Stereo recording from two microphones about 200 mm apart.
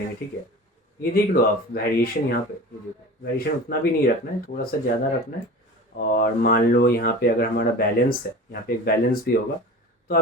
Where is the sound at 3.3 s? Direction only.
50° left (ahead or behind).